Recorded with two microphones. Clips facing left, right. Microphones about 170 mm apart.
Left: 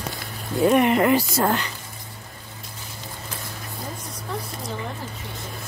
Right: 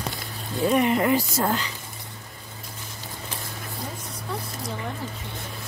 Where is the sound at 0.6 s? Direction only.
65° left (ahead or behind).